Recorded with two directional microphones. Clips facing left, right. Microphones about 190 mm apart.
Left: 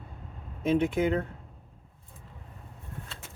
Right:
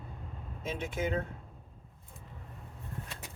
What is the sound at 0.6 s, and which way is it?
Speech, 60° left (ahead or behind).